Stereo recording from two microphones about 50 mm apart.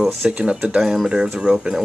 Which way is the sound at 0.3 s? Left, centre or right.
Right.